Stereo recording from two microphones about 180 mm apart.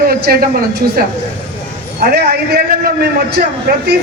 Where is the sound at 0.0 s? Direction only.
55° right (ahead or behind).